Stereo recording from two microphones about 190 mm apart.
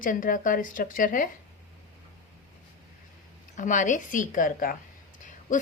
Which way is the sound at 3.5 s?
40° left (ahead or behind).